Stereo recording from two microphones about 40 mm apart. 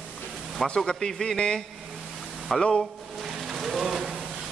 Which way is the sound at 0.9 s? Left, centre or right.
Centre.